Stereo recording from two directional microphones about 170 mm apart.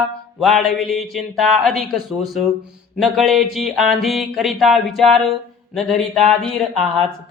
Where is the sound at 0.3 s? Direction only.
Centre (ahead or behind).